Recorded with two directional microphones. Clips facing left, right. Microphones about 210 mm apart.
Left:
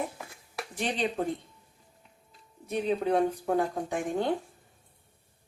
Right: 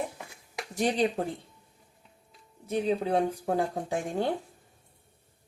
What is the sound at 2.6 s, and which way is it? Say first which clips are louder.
Speech: even; 30° right (ahead or behind).